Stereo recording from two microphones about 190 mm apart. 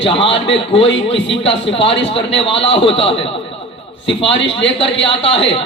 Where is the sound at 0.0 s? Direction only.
30° left (ahead or behind).